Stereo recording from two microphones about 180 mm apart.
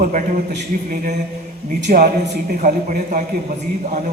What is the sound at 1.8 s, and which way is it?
A man's voice, 55° right (ahead or behind).